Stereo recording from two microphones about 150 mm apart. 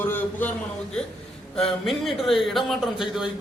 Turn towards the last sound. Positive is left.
turn(degrees=0)  # may be behind; listen again after turning